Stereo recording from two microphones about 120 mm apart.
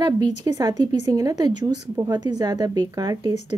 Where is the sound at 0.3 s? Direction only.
35° right (ahead or behind).